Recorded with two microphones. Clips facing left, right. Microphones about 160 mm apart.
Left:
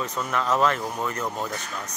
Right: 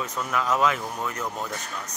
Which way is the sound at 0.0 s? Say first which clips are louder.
Left 1 dB; 5° right (ahead or behind).